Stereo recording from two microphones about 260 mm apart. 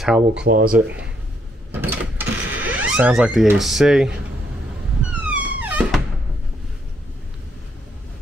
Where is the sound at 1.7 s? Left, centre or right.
Centre.